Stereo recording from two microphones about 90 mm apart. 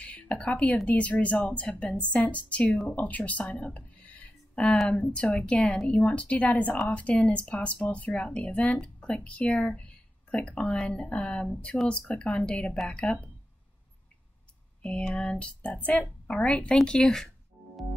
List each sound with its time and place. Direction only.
0.0 s speech: 15° left (ahead or behind)
14.8 s speech: 10° left (ahead or behind)